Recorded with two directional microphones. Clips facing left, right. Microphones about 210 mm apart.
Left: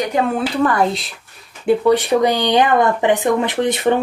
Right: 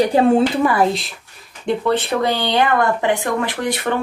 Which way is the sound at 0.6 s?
5° right (ahead or behind).